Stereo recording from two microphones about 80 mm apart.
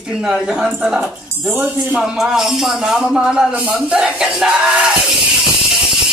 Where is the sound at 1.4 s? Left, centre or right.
Right.